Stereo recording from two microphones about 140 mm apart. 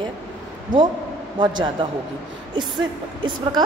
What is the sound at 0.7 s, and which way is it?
Speech, 70° right (ahead or behind).